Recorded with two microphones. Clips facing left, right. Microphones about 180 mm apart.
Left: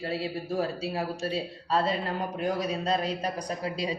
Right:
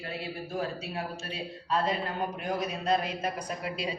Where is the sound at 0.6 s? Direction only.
35° left (ahead or behind).